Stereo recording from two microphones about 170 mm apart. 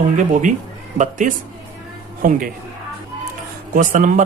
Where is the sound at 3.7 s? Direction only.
50° right (ahead or behind).